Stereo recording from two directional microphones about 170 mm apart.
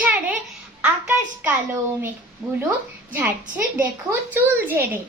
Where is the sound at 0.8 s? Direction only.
10° right (ahead or behind).